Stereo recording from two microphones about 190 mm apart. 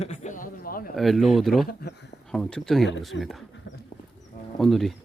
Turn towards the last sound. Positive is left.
turn(degrees=0)  # may be behind; listen again after turning